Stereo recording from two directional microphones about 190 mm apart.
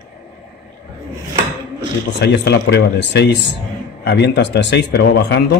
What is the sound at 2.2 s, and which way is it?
A man's voice, 60° left (ahead or behind).